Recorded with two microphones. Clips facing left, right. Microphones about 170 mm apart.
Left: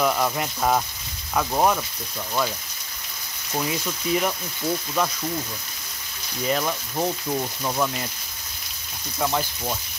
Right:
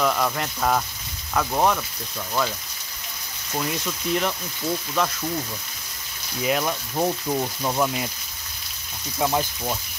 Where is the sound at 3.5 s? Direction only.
5° left (ahead or behind).